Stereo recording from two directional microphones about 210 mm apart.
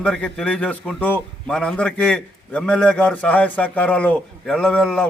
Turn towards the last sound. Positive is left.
turn(degrees=0)  # may be behind; listen again after turning